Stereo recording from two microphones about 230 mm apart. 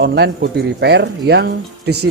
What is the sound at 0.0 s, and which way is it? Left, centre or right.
A man's voice, right.